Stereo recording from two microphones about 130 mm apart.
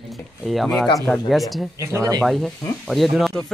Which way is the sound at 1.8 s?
25° right (ahead or behind).